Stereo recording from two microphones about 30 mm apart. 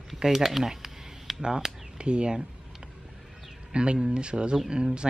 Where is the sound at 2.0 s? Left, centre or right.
Right.